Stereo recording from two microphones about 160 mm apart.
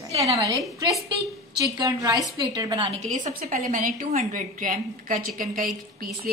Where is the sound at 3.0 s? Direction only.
50° right (ahead or behind).